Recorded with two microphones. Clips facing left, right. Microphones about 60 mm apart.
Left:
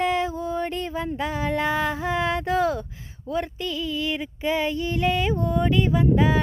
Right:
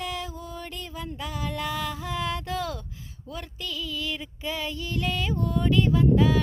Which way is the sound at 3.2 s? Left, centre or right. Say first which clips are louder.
Left 10 dB; left.